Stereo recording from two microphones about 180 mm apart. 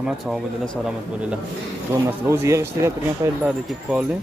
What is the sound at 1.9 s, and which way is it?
A man's voice, 10° right (ahead or behind).